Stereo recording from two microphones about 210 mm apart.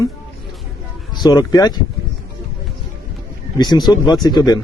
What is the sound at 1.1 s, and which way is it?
Speech, 20° left (ahead or behind).